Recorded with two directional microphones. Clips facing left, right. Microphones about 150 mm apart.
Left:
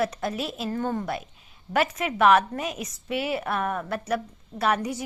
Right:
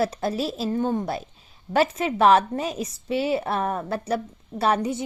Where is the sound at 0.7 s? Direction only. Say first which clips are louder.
Right 2 dB; 20° right (ahead or behind).